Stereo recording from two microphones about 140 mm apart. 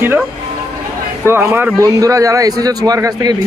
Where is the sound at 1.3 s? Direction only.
15° right (ahead or behind).